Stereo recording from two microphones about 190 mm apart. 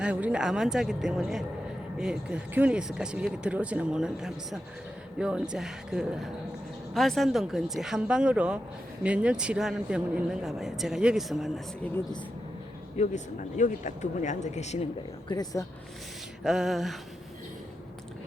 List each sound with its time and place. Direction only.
0.0 s speech: 5° right (ahead or behind)
13.0 s speech: 40° left (ahead or behind)
15.3 s speech: 20° left (ahead or behind)
16.4 s speech: centre (ahead or behind)